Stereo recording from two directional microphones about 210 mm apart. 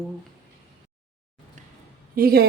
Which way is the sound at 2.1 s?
45° right (ahead or behind).